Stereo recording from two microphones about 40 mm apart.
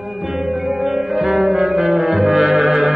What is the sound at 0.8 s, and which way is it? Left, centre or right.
Music, centre.